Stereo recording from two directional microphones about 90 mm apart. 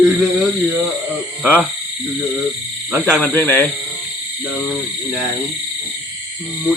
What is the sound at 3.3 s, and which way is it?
Speech, 15° left (ahead or behind).